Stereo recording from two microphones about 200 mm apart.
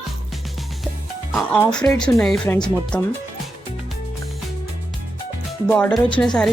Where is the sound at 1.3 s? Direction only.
Centre (ahead or behind).